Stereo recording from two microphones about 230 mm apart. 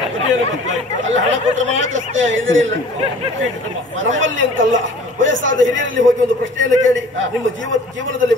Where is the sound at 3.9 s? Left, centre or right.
Right.